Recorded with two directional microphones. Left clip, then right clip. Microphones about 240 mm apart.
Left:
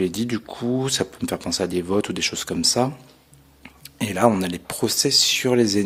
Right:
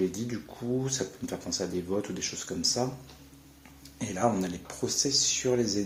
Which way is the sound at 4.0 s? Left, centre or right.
Left.